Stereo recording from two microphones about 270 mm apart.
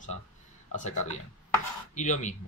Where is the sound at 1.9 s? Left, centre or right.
Left.